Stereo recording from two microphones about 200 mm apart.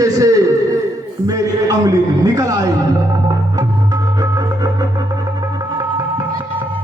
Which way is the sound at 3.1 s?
20° right (ahead or behind).